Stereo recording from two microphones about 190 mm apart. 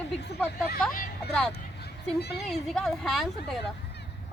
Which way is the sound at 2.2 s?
60° left (ahead or behind).